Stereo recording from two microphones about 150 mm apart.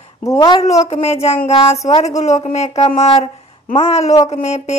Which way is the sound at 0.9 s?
45° left (ahead or behind).